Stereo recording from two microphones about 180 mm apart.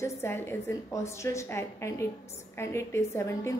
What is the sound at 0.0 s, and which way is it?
A woman's voice, 15° left (ahead or behind).